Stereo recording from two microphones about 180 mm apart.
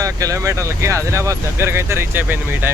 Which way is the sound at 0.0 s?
20° right (ahead or behind).